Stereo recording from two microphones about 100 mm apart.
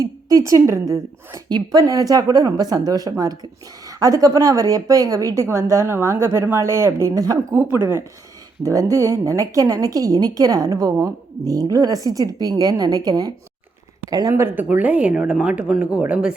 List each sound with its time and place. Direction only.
0.0 s a woman's voice: 35° right (ahead or behind)
1.5 s a woman's voice: 45° right (ahead or behind)
7.5 s a woman's voice: 20° right (ahead or behind); by 14.3 s 40° right (ahead or behind)
14.3 s speech: 20° right (ahead or behind)